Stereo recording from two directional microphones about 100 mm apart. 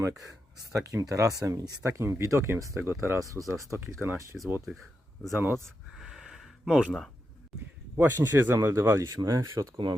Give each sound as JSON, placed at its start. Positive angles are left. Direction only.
{"t": 0.3, "sound": "speech", "side_deg": -35}
{"t": 1.9, "sound": "speech", "side_deg": -25}
{"t": 4.3, "sound": "speech", "side_deg": 5}
{"t": 5.3, "sound": "speech", "side_deg": -25}
{"t": 5.9, "sound": "a sound", "side_deg": -5}
{"t": 7.9, "sound": "speech", "side_deg": -20}